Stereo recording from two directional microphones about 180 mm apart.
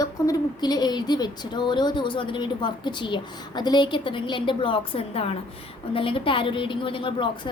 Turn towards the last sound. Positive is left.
turn(degrees=30)  # may be behind; listen again after turning